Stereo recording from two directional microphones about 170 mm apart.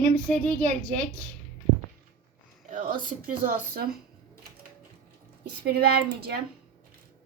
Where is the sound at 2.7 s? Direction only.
50° right (ahead or behind).